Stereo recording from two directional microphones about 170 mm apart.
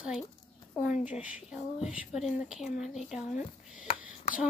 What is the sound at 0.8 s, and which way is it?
A woman's voice, 5° right (ahead or behind).